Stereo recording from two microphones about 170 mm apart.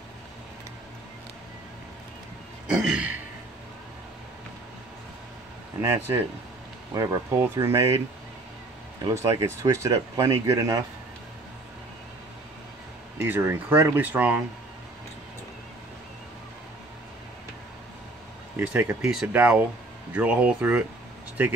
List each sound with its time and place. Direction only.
2.7 s throat clearing: 5° right (ahead or behind)
5.8 s speech: 15° right (ahead or behind)
9.0 s speech: 20° right (ahead or behind)
13.2 s speech: 15° right (ahead or behind)
18.6 s speech: 10° right (ahead or behind)